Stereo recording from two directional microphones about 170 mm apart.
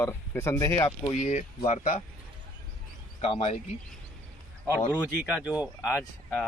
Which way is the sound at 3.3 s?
35° left (ahead or behind).